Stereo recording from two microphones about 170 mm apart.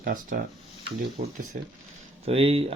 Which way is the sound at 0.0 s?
55° right (ahead or behind).